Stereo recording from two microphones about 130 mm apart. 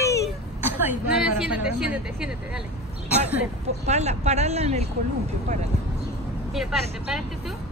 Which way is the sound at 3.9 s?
60° right (ahead or behind).